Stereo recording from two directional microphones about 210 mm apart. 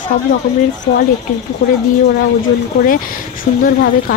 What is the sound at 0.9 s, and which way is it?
Speech, 20° left (ahead or behind).